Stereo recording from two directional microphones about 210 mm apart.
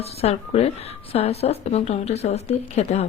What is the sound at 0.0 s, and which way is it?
A woman's voice, 30° left (ahead or behind).